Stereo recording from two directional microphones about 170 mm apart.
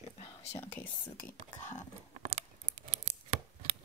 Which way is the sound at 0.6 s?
10° left (ahead or behind).